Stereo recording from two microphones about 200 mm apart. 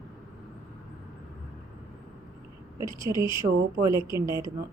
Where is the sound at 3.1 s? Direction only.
20° left (ahead or behind).